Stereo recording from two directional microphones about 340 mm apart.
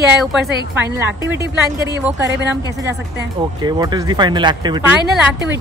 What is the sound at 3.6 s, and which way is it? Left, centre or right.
Speech, centre.